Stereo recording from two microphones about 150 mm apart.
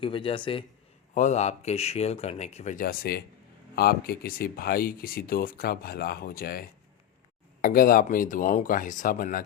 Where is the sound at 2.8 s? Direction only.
85° left.